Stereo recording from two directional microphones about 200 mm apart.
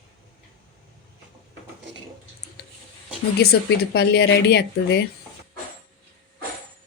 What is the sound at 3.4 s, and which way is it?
Speech, 50° left (ahead or behind).